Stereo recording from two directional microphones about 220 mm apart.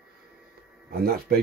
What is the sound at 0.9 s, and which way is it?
Speech, 45° right (ahead or behind).